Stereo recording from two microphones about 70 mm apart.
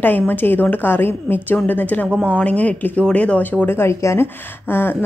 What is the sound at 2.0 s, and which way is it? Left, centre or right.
Speech, centre.